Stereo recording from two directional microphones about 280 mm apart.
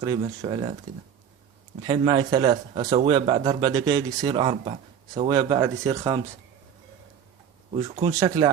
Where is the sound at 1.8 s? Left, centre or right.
Centre.